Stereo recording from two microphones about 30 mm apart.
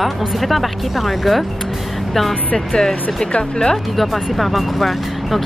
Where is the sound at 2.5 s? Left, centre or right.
Left.